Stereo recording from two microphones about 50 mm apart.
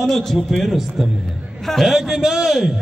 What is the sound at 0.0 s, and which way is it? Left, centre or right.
Speech, centre.